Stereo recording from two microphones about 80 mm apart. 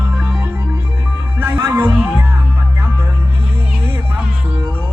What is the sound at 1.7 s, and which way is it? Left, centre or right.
Music, right.